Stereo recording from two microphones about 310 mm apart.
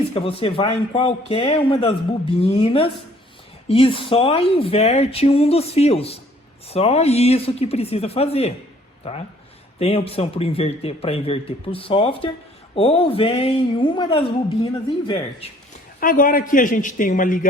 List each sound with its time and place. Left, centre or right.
0.1 s speech: centre
9.7 s speech: centre